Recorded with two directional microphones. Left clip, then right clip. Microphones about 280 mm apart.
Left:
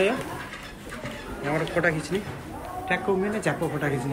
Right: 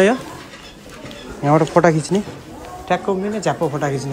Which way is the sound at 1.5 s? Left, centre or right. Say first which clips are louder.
Right 11 dB; right.